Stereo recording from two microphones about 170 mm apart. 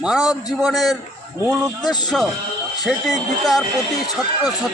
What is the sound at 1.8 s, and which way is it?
Speech, 25° left (ahead or behind).